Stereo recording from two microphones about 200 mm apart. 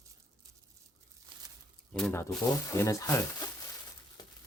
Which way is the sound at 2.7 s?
15° left (ahead or behind).